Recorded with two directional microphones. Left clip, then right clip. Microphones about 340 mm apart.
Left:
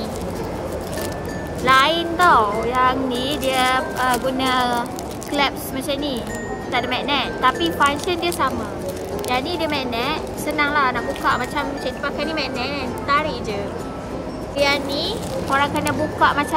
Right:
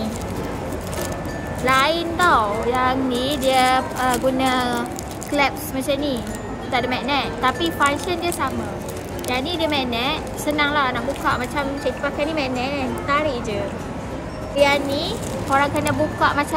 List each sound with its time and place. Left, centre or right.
1.7 s a woman's voice: centre
14.6 s a woman's voice: centre